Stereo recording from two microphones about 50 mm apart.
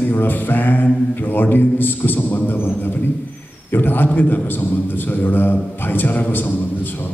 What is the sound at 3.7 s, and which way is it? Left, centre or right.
A man's voice, left.